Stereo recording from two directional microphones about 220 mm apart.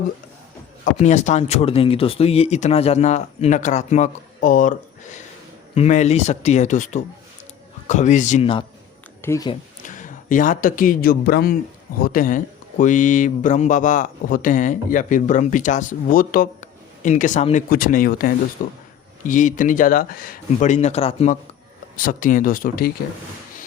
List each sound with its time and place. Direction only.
0.9 s speech: 30° left (ahead or behind)
9.2 s speech: 15° left (ahead or behind)
9.8 s speech: 35° left (ahead or behind)
21.9 s speech: 40° left (ahead or behind)